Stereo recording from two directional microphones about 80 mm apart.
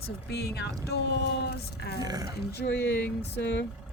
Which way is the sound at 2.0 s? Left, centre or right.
Right.